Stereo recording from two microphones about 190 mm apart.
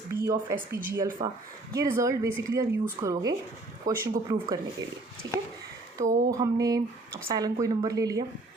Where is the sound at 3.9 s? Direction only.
50° right (ahead or behind).